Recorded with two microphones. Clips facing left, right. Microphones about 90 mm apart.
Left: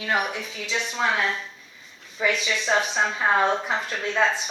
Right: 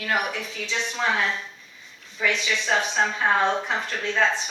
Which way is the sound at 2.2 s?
20° left (ahead or behind).